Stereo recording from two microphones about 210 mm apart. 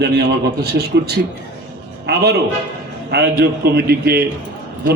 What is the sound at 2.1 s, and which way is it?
A man's voice, 50° right (ahead or behind).